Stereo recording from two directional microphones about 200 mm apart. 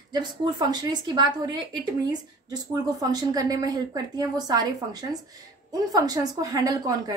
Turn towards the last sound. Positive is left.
turn(degrees=-20)  # may be behind; listen again after turning